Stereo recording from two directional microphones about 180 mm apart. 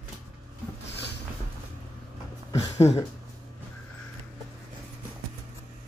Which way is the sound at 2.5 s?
35° left (ahead or behind).